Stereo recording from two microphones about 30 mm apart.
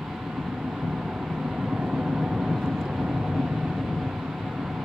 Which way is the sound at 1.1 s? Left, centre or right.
Right.